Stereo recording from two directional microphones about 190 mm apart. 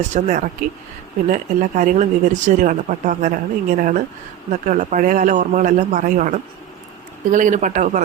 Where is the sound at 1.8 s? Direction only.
40° right (ahead or behind).